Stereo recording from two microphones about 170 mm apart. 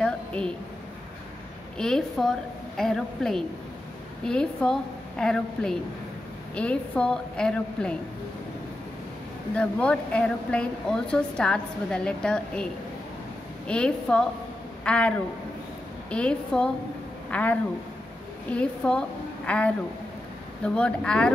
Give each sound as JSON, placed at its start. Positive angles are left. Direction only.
{"t": 0.0, "sound": "a sound", "side_deg": 5}
{"t": 1.8, "sound": "a woman's voice", "side_deg": 5}
{"t": 9.6, "sound": "a woman's voice", "side_deg": 5}
{"t": 13.7, "sound": "a woman's voice", "side_deg": 5}